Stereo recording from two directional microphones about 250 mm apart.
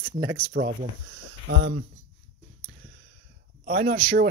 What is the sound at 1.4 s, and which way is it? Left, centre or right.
Speech, right.